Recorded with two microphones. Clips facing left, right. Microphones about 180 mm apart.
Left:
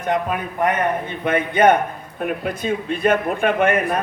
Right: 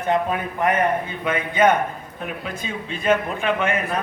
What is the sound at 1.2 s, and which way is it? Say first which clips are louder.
A man's voice: left 3 dB; 55° left (ahead or behind).